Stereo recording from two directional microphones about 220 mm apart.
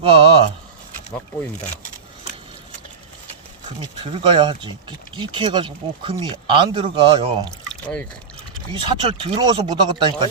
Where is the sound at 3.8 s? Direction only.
25° right (ahead or behind).